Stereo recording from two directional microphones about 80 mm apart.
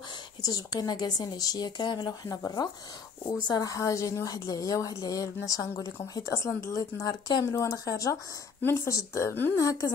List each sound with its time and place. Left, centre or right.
0.4 s a woman's voice: left
2.0 s a woman's voice: left
6.8 s a woman's voice: left